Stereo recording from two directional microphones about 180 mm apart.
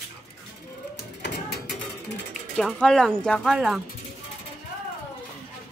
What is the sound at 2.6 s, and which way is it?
Speech, 5° left (ahead or behind).